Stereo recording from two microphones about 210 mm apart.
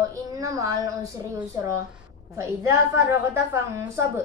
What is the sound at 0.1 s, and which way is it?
A woman's voice, 15° right (ahead or behind).